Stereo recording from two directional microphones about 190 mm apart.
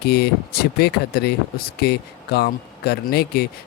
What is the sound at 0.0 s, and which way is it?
Speech, 60° left (ahead or behind).